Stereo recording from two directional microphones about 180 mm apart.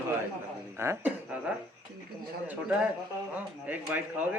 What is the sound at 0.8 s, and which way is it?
Speech, 10° right (ahead or behind).